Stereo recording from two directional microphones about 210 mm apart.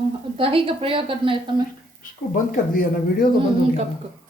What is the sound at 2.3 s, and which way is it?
Speech, 45° left (ahead or behind).